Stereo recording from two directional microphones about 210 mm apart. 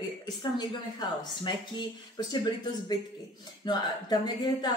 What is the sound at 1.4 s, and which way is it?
Speech, 20° left (ahead or behind).